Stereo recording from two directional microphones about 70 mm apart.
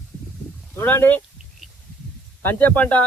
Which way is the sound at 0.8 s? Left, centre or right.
Left.